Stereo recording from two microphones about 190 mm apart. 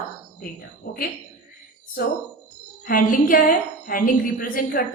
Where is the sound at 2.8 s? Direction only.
45° left (ahead or behind).